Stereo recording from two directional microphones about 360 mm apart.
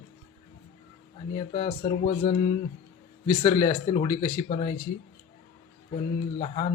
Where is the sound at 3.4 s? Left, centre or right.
Centre.